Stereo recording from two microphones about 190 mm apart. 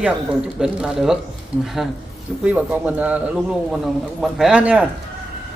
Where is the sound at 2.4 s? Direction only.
5° right (ahead or behind).